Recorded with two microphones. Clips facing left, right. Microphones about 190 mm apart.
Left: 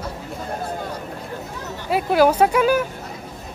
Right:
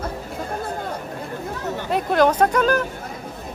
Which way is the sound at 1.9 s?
5° left (ahead or behind).